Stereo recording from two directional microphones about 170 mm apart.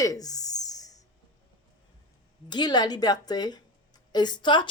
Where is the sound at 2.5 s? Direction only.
25° left (ahead or behind).